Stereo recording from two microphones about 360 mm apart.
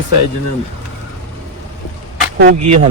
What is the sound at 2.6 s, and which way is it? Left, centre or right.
Speech, right.